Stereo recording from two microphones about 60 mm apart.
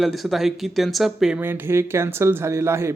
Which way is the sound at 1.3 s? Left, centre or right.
Right.